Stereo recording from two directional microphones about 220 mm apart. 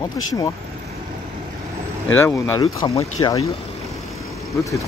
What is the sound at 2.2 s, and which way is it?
Speech, 10° left (ahead or behind).